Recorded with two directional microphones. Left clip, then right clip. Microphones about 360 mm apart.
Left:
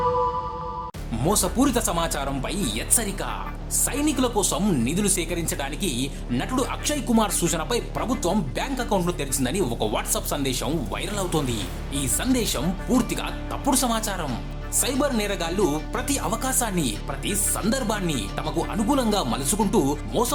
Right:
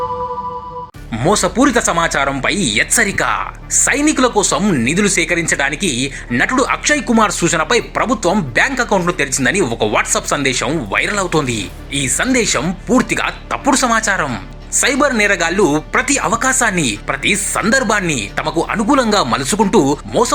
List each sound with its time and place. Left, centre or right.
1.1 s speech: left